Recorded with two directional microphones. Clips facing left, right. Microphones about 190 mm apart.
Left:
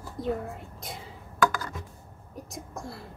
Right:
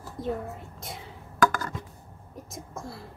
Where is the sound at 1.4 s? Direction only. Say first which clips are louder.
Right 1 dB; 50° right (ahead or behind).